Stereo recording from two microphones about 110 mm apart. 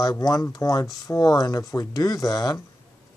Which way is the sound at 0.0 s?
30° left (ahead or behind).